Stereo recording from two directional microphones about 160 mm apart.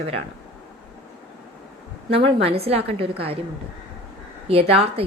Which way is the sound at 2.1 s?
40° right (ahead or behind).